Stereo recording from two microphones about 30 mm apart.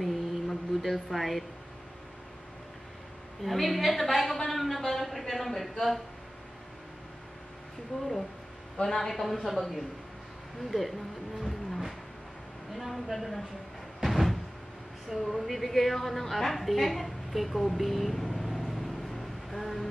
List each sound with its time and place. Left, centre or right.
0.0 s a sound: centre
3.4 s a woman's voice: centre
7.9 s speech: left
9.0 s a woman's voice: centre
12.7 s a sound: centre
15.3 s a woman's voice: centre
17.7 s vehicle: centre